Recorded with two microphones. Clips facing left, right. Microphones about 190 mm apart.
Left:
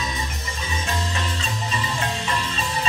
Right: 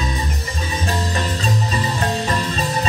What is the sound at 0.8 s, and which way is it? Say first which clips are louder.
Music: right 5 dB; 40° right (ahead or behind).